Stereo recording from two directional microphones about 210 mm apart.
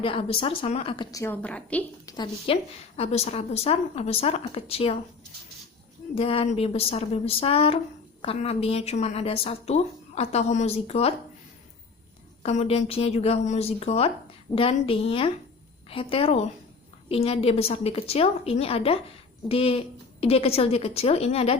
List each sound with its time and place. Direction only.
0.0 s a woman's voice: 25° left (ahead or behind); by 1.8 s 5° left (ahead or behind)
2.0 s a woman's voice: 20° left (ahead or behind)
2.9 s a woman's voice: 30° left (ahead or behind)
6.1 s a woman's voice: 25° left (ahead or behind)
12.4 s a woman's voice: 30° left (ahead or behind)